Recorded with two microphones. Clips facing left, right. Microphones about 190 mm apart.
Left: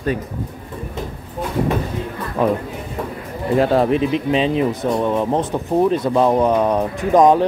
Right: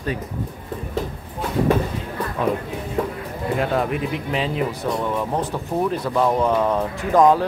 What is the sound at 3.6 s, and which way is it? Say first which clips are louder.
Speech: left 7 dB; 30° left (ahead or behind).